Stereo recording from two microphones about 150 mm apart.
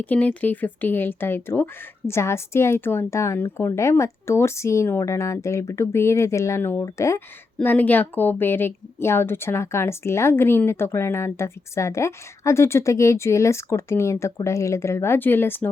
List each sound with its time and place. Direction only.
0.0 s a woman's voice: 10° left (ahead or behind)